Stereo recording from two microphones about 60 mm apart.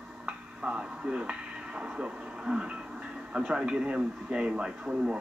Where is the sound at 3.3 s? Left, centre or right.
Centre.